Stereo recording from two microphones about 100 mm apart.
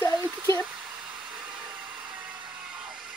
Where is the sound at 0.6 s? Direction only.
10° right (ahead or behind).